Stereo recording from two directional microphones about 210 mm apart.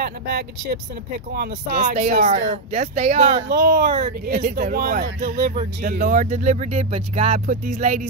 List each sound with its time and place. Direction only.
0.0 s speech: 50° right (ahead or behind)
2.0 s speech: 35° right (ahead or behind)
3.4 s speech: 50° right (ahead or behind); by 8.1 s 35° right (ahead or behind)